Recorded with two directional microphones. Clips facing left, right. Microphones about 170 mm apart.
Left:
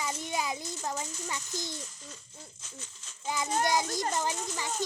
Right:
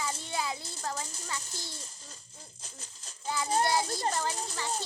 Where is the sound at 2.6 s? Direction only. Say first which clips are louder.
Left 2 dB; 35° right (ahead or behind).